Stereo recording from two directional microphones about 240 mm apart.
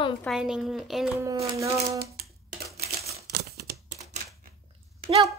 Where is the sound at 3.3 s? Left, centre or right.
Right.